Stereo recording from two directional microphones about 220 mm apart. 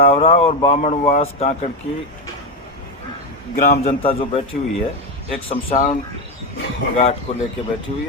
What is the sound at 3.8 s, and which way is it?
Speech, 25° left (ahead or behind).